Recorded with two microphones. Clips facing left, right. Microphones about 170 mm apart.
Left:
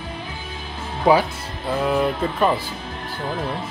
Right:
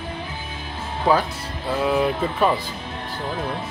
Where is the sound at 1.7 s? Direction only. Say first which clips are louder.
Even; centre (ahead or behind).